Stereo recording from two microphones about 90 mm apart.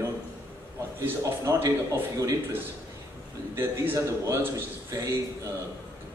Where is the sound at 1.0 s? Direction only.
30° right (ahead or behind).